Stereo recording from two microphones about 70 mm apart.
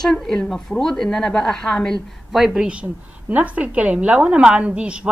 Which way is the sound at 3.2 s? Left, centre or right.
Right.